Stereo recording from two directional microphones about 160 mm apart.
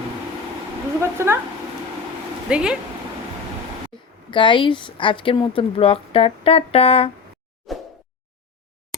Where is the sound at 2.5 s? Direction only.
5° right (ahead or behind).